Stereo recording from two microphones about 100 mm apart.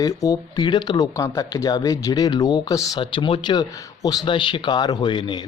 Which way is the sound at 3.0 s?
55° left (ahead or behind).